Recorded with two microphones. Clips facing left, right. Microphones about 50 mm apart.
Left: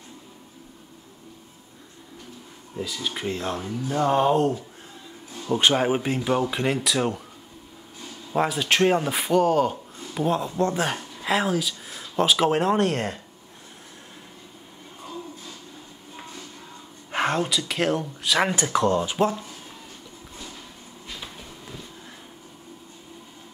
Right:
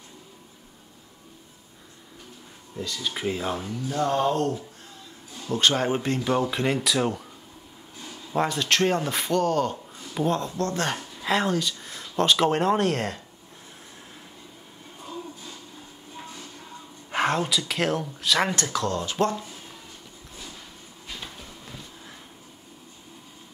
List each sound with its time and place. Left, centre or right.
2.7 s speech: centre
3.9 s a man's voice: centre
8.3 s a man's voice: centre
17.1 s speech: centre
18.7 s speech: left
19.1 s a man's voice: centre